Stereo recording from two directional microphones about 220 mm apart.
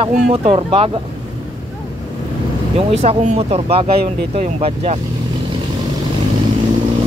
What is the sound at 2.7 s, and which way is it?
Speech, 30° right (ahead or behind).